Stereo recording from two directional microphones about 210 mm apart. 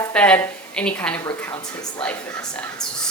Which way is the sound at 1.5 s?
25° left (ahead or behind).